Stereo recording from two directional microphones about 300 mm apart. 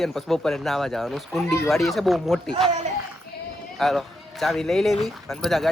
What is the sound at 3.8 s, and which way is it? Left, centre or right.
A man's voice, centre.